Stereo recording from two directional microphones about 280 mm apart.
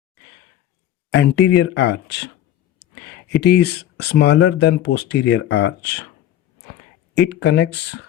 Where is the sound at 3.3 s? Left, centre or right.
Left.